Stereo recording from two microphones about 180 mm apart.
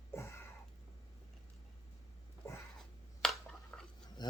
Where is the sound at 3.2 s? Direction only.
Centre (ahead or behind).